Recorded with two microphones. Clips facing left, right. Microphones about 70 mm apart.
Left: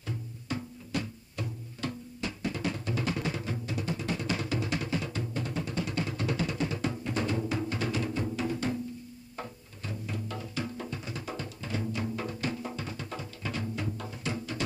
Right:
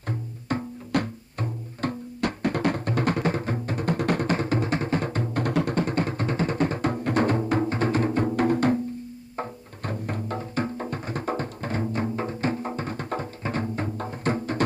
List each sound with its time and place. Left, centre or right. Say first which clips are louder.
0.0 s music: right 6 dB; right
5.8 s music: right 7 dB; right
9.8 s music: right 7 dB; right